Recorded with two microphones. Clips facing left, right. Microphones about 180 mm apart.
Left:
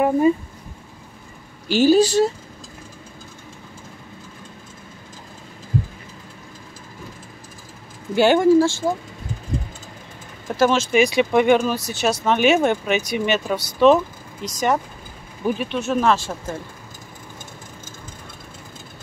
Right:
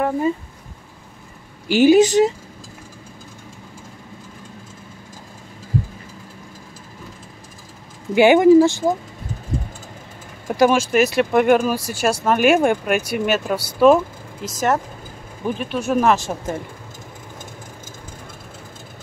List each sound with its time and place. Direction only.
1.7 s speech: 15° right (ahead or behind)
8.1 s speech: 15° right (ahead or behind)
10.4 s speech: 10° right (ahead or behind); by 15.8 s 5° left (ahead or behind)
15.8 s speech: 10° right (ahead or behind)